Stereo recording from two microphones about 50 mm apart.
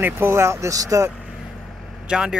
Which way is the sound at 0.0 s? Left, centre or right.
Right.